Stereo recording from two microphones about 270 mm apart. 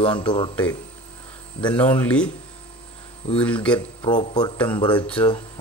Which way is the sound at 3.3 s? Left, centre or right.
Centre.